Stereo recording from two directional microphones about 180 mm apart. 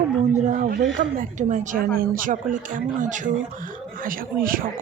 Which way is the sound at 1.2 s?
45° right (ahead or behind).